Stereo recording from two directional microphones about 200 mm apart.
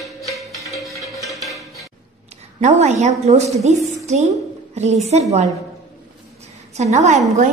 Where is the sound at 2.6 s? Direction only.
35° right (ahead or behind).